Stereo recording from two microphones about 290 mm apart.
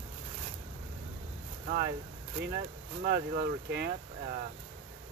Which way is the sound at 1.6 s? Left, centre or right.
Right.